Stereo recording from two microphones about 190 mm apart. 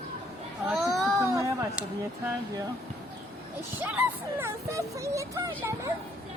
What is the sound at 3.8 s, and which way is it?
Speech, 10° right (ahead or behind).